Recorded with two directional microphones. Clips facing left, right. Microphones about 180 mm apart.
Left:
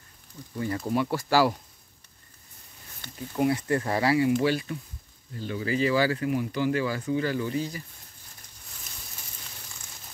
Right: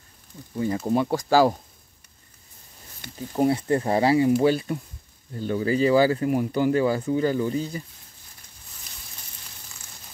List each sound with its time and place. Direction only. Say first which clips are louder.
0.6 s speech: right 4 dB; 20° right (ahead or behind)
3.3 s speech: right 3 dB; 30° right (ahead or behind)
5.4 s speech: right 5 dB; 40° right (ahead or behind)